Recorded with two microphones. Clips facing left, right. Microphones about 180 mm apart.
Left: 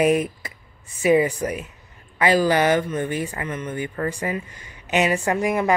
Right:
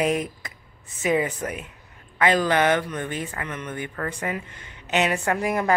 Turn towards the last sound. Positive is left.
turn(degrees=5)  # may be behind; listen again after turning